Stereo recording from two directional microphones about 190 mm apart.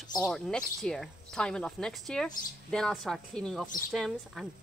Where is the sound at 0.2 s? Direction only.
5° left (ahead or behind).